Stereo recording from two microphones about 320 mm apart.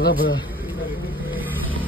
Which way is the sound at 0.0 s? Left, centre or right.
Left.